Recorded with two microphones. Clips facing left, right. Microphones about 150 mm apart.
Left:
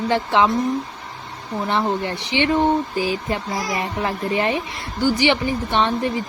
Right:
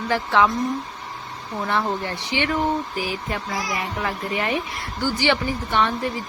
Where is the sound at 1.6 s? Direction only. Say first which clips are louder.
Left 3 dB; 20° left (ahead or behind).